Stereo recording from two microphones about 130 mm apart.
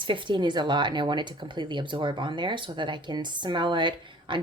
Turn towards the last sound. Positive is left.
turn(degrees=-35)  # may be behind; listen again after turning